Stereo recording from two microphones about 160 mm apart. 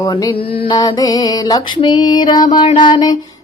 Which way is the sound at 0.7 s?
25° left (ahead or behind).